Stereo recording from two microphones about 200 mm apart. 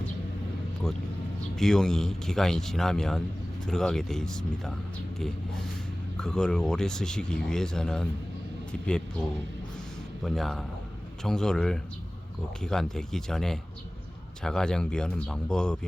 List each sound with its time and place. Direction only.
1.5 s speech: centre (ahead or behind)
6.1 s speech: 5° left (ahead or behind)
10.2 s speech: centre (ahead or behind)